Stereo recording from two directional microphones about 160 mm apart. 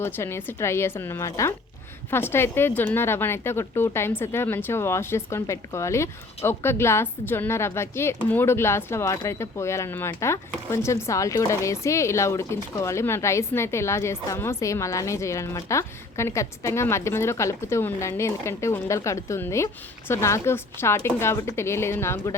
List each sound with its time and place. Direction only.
0.0 s a woman's voice: 15° left (ahead or behind)